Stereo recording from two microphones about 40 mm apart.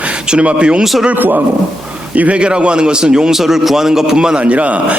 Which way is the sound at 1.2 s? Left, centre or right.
Right.